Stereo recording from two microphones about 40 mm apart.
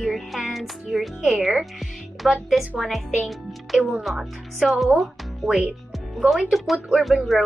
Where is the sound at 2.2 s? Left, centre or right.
Centre.